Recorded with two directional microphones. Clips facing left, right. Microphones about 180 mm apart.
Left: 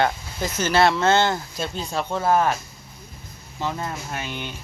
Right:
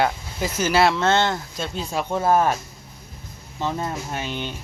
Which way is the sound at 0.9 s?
5° left (ahead or behind).